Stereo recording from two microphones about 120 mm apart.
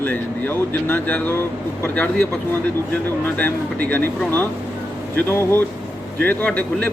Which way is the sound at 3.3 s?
15° left (ahead or behind).